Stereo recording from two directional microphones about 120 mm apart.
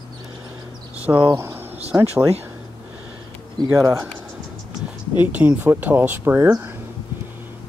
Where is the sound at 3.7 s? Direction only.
25° right (ahead or behind).